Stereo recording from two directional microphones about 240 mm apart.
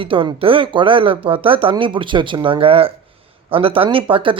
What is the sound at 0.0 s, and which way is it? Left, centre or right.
Speech, right.